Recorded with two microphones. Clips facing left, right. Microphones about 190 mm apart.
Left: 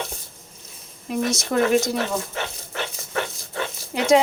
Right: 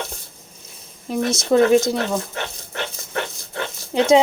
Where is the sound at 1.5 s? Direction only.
25° right (ahead or behind).